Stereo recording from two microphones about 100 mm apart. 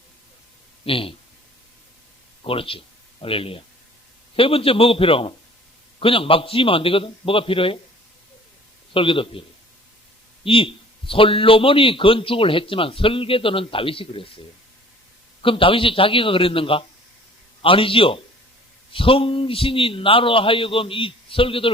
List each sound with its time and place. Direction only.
0.9 s a man's voice: 65° left (ahead or behind)
2.4 s a man's voice: 65° left (ahead or behind)
8.9 s a man's voice: 60° left (ahead or behind)
10.4 s a man's voice: 60° left (ahead or behind)
15.4 s a man's voice: 60° left (ahead or behind)